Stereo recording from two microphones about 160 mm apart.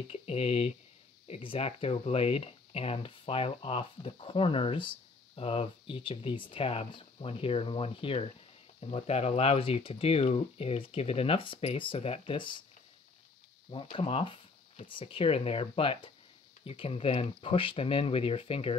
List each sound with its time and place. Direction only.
0.1 s speech: 40° left (ahead or behind)
13.9 s speech: 30° left (ahead or behind)